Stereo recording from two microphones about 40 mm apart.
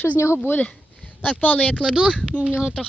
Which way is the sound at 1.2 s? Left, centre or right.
Left.